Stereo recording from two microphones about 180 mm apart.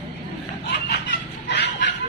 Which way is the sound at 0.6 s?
70° left (ahead or behind).